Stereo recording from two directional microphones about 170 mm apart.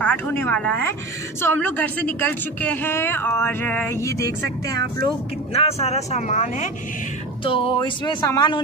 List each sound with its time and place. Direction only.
0.0 s a woman's voice: 10° left (ahead or behind)
4.4 s speech: 85° right
5.5 s a woman's voice: 35° left (ahead or behind)
7.4 s speech: 30° left (ahead or behind)